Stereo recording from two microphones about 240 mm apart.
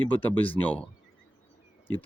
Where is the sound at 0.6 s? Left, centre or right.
Centre.